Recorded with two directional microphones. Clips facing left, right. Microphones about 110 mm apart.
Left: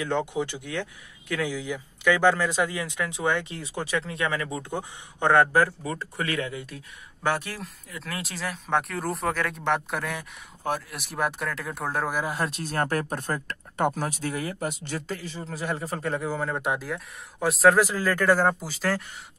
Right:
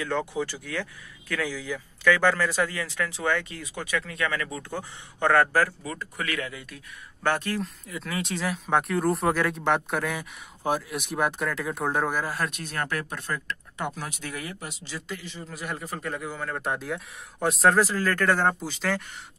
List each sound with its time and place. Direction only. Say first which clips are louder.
0.0 s speech: left 1 dB; 20° left (ahead or behind)
7.2 s speech: right 2 dB; 10° left (ahead or behind)
12.2 s speech: left 1 dB; 20° left (ahead or behind)
12.4 s speech: left 4 dB; 35° left (ahead or behind); by 15.0 s 50° left (ahead or behind)
15.0 s speech: left 3 dB; 35° left (ahead or behind)
16.5 s speech: left 2 dB; 10° left (ahead or behind)
16.8 s speech: right 1 dB; centre (ahead or behind)
17.7 s speech: even; 15° left (ahead or behind)